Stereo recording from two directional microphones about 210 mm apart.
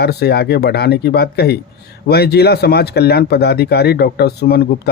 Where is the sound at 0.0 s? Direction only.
50° left (ahead or behind).